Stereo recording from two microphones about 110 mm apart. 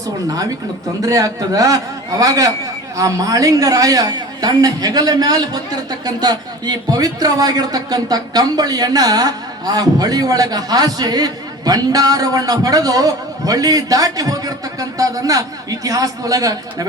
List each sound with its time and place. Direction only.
1.0 s a man's voice: 35° right (ahead or behind)